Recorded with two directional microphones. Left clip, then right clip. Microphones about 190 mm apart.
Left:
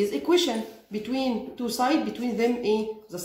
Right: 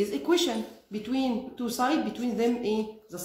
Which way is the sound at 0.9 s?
20° right (ahead or behind).